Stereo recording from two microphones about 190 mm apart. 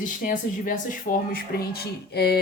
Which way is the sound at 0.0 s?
45° left (ahead or behind).